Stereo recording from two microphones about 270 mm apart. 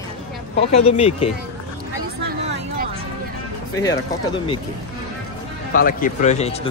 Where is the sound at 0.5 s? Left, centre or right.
Left.